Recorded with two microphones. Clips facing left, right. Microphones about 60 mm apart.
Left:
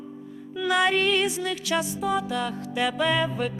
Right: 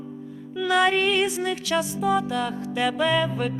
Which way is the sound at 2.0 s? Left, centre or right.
Centre.